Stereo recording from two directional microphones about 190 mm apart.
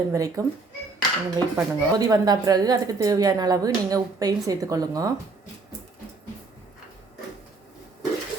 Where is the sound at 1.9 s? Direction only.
20° right (ahead or behind).